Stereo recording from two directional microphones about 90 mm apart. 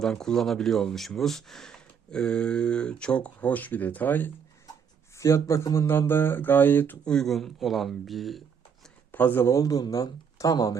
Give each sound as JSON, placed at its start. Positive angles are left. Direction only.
{"t": 0.0, "sound": "speech", "side_deg": 5}
{"t": 5.1, "sound": "speech", "side_deg": 35}
{"t": 7.0, "sound": "speech", "side_deg": 10}
{"t": 9.1, "sound": "speech", "side_deg": 20}
{"t": 9.5, "sound": "speech", "side_deg": 40}